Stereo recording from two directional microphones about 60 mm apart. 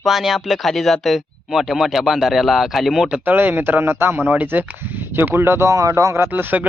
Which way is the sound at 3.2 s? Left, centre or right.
Right.